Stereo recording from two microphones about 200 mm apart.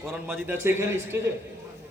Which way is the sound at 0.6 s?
15° right (ahead or behind).